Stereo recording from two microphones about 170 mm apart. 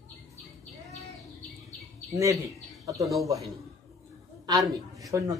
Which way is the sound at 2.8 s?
20° right (ahead or behind).